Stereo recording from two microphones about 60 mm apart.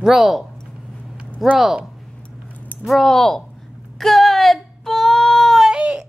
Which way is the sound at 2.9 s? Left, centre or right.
Centre.